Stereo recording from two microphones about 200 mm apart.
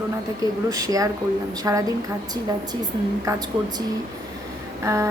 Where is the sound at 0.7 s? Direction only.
15° right (ahead or behind).